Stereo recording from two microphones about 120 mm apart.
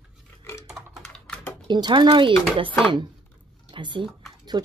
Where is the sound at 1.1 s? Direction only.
5° left (ahead or behind).